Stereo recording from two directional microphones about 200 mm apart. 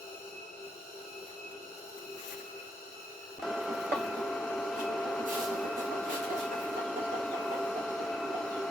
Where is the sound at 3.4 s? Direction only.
Centre (ahead or behind).